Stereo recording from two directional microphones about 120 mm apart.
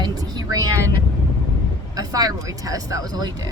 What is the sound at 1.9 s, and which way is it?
Speech, 30° right (ahead or behind).